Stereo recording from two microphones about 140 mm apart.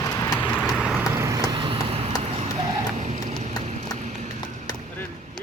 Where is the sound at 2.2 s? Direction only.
50° right (ahead or behind).